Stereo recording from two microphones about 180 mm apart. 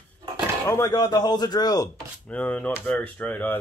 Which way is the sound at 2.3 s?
5° left (ahead or behind).